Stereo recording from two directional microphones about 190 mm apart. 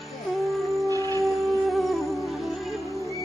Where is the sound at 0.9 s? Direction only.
20° right (ahead or behind).